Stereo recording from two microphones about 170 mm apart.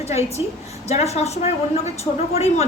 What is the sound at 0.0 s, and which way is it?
A woman's voice, 40° left (ahead or behind).